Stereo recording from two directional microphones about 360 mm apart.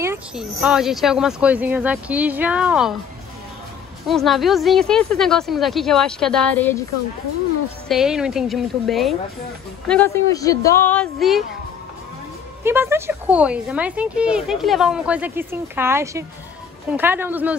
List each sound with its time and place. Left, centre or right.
0.0 s speech: centre
4.1 s speech: centre
7.9 s speech: centre
12.6 s speech: centre